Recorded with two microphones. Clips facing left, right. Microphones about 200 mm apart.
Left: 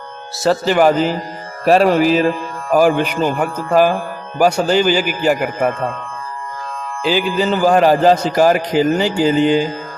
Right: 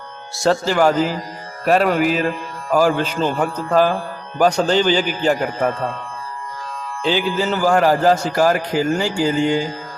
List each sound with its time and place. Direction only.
0.3 s speech: centre (ahead or behind)
0.6 s a man's voice: 20° left (ahead or behind)
2.7 s speech: 15° left (ahead or behind)
7.0 s a man's voice: 10° left (ahead or behind)